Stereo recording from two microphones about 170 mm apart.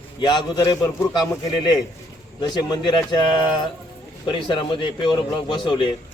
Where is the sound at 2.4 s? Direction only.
25° left (ahead or behind).